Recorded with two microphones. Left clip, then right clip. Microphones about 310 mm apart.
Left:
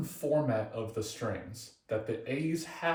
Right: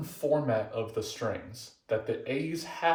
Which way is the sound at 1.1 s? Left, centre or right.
Centre.